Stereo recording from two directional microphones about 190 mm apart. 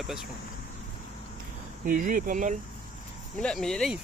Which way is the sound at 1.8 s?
45° right (ahead or behind).